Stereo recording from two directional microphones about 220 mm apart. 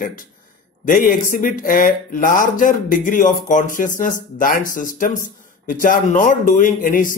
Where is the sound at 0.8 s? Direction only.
40° left (ahead or behind).